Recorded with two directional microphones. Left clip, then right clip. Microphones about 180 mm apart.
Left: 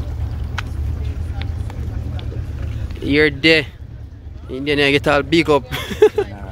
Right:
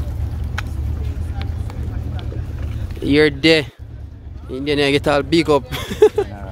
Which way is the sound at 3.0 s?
20° right (ahead or behind).